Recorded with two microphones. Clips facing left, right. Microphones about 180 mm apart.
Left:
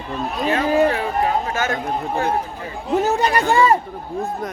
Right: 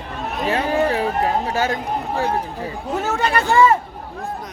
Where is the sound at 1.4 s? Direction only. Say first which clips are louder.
Right 2 dB; 35° right (ahead or behind).